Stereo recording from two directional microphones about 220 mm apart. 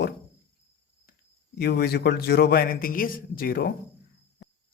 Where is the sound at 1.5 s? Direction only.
45° left (ahead or behind).